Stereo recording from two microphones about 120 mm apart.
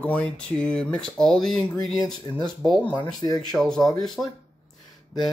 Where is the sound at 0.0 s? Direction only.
10° left (ahead or behind).